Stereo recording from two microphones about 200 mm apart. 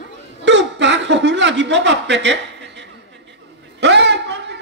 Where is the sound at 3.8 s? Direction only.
60° right (ahead or behind).